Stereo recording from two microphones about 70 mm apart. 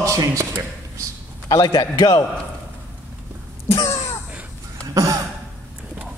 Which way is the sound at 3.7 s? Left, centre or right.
Left.